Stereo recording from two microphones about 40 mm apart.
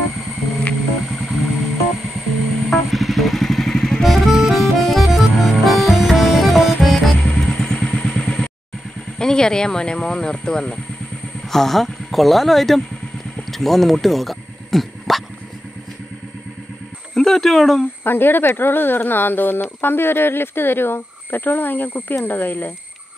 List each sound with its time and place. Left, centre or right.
1.0 s music: centre
2.5 s vehicle: centre
4.0 s music: centre
7.4 s vehicle: left
9.2 s speech: centre
11.5 s speech: centre
14.0 s a sound: centre
17.1 s speech: centre
18.0 s speech: left